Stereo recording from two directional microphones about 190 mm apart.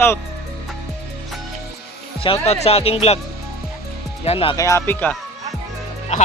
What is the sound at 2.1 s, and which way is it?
Speech, 30° left (ahead or behind).